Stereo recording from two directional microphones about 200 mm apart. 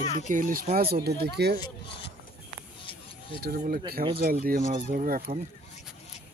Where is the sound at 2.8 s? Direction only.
25° left (ahead or behind).